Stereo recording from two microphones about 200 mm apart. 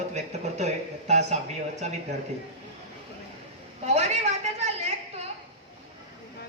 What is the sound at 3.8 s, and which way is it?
Speech, 35° right (ahead or behind).